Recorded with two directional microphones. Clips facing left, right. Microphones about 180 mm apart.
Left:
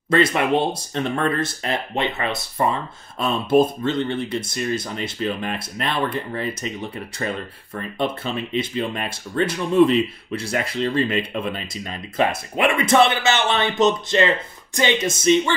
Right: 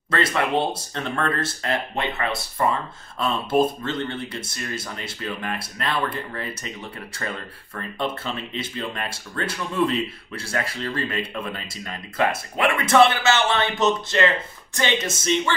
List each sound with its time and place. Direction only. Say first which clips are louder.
0.1 s speech: left 4 dB; 15° left (ahead or behind)
7.7 s speech: left 3 dB; 15° left (ahead or behind)